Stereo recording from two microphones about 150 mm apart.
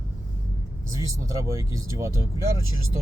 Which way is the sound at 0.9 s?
20° right (ahead or behind).